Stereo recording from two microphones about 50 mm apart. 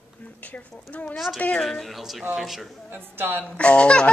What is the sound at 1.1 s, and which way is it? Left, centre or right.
Speech, centre.